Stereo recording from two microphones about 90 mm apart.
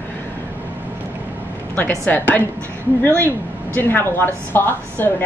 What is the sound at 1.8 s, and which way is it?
A woman's voice, 20° left (ahead or behind).